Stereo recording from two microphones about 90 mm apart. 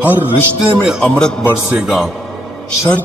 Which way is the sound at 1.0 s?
10° left (ahead or behind).